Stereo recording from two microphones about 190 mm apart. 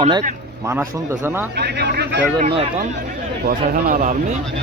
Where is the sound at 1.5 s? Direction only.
60° right (ahead or behind).